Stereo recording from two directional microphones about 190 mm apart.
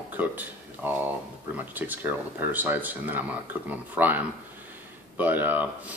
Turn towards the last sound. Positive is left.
turn(degrees=-10)  # may be behind; listen again after turning